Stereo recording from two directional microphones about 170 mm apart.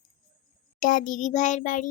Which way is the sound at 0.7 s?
50° left (ahead or behind).